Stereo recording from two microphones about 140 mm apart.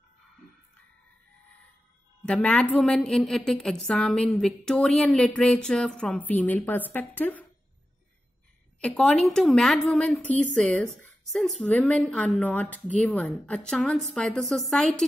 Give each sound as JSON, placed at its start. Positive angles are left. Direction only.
{"t": 2.2, "sound": "a woman's voice", "side_deg": 5}
{"t": 8.8, "sound": "a woman's voice", "side_deg": 5}